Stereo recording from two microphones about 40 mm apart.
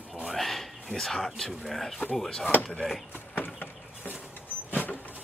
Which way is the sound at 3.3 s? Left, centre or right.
Left.